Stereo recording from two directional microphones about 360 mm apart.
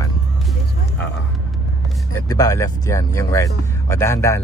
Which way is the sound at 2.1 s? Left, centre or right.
Centre.